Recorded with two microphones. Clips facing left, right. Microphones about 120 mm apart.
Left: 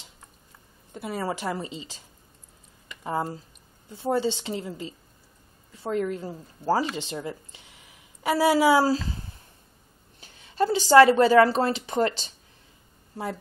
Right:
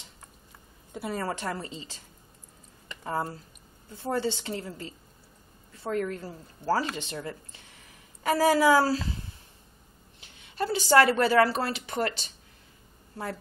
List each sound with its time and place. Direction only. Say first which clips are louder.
0.9 s a woman's voice: even; centre (ahead or behind)
1.2 s a woman's voice: left 3 dB; 15° left (ahead or behind)
3.0 s a woman's voice: left 2 dB; 15° left (ahead or behind)
10.2 s a sound: left 6 dB; 30° left (ahead or behind)
10.9 s speech: left 5 dB; 20° left (ahead or behind)
11.5 s speech: left 6 dB; 30° left (ahead or behind)